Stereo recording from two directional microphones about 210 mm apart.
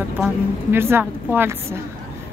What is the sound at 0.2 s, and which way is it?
Speech, 10° right (ahead or behind).